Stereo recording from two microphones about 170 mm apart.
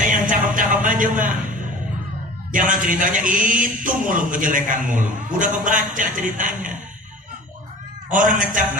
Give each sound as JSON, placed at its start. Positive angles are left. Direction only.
{"t": 0.0, "sound": "a sound", "side_deg": -50}
{"t": 2.5, "sound": "music", "side_deg": -50}
{"t": 8.1, "sound": "music", "side_deg": -50}